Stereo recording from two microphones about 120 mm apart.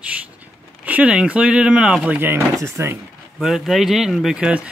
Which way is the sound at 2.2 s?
20° right (ahead or behind).